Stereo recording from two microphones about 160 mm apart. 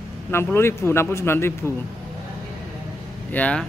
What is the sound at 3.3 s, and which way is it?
Speech, 10° left (ahead or behind).